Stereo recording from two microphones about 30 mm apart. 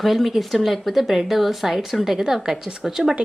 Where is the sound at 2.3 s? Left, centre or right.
Centre.